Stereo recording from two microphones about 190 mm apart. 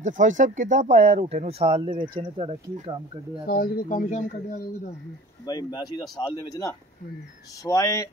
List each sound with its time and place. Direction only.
0.0 s speech: 40° right (ahead or behind)
3.4 s speech: 50° left (ahead or behind)
5.5 s speech: 20° left (ahead or behind)